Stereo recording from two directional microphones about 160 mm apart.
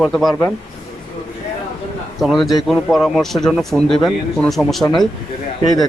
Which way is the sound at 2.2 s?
Centre (ahead or behind).